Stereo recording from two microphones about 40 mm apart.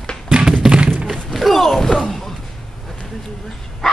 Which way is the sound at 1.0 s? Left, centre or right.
Centre.